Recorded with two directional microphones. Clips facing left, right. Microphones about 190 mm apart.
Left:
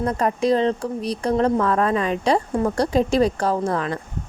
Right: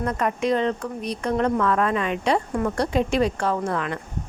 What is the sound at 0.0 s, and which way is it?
A woman's voice, 30° left (ahead or behind).